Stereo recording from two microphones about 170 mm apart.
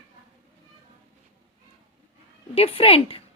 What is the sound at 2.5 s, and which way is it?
Speech, 35° left (ahead or behind).